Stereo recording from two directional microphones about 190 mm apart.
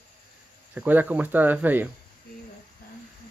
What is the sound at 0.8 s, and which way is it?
Speech, 10° right (ahead or behind).